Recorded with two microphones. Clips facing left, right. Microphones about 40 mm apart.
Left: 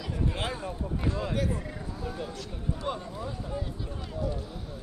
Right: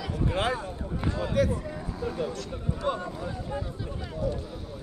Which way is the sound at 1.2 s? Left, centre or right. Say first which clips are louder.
Right 9 dB; right.